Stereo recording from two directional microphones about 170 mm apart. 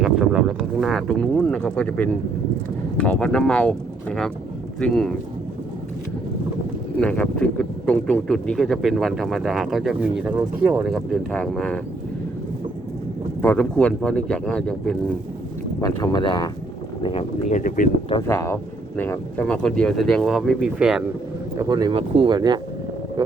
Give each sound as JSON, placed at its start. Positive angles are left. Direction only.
{"t": 0.0, "sound": "speech", "side_deg": -5}
{"t": 7.0, "sound": "speech", "side_deg": 5}
{"t": 13.4, "sound": "speech", "side_deg": 10}
{"t": 15.8, "sound": "speech", "side_deg": 25}
{"t": 17.6, "sound": "speech", "side_deg": 50}
{"t": 18.2, "sound": "speech", "side_deg": 15}
{"t": 21.6, "sound": "speech", "side_deg": -25}